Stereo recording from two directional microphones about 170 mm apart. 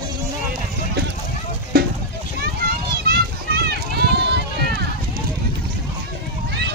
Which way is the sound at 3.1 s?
70° right (ahead or behind).